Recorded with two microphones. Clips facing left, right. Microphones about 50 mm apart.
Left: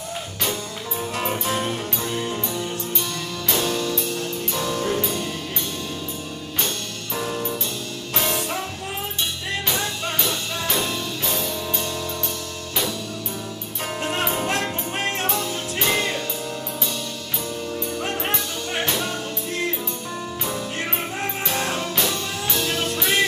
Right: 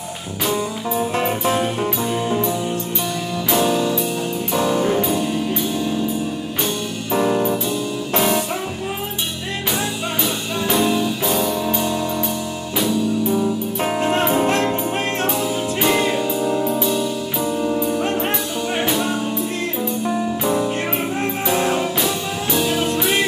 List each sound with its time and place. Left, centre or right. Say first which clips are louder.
1.1 s music: right 3 dB; right
1.6 s music: right 6 dB; centre
7.1 s music: right 9 dB; right
10.2 s music: right 4 dB; centre
13.8 s music: right 6 dB; right
15.2 s music: right 5 dB; centre
20.4 s music: right 7 dB; centre